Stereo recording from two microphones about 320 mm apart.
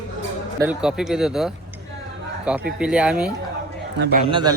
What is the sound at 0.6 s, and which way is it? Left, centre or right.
Speech, centre.